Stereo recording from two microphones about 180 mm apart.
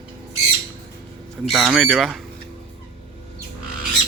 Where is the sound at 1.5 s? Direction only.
Centre (ahead or behind).